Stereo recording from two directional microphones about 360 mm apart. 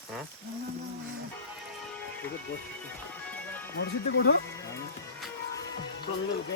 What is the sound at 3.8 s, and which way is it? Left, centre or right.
Speech, left.